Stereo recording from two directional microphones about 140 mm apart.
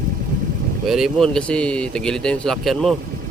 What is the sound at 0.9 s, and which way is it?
Speech, centre (ahead or behind).